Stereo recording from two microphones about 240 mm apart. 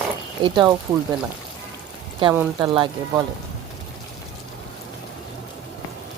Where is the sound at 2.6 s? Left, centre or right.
Centre.